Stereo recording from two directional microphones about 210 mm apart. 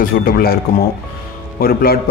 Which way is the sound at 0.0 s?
45° left (ahead or behind).